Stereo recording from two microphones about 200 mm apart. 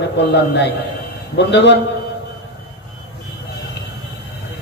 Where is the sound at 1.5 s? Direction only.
60° left (ahead or behind).